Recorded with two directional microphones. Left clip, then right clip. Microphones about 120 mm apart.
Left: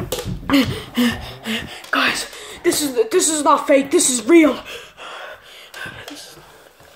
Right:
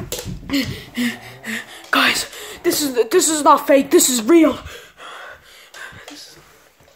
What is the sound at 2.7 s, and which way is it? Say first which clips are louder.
Speech: right 1 dB; 40° right (ahead or behind).